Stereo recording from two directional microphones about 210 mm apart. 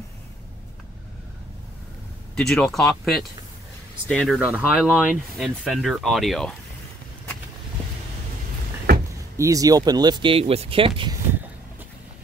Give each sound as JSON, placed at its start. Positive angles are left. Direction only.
{"t": 2.3, "sound": "speech", "side_deg": 0}
{"t": 8.9, "sound": "door", "side_deg": -45}
{"t": 9.4, "sound": "speech", "side_deg": -15}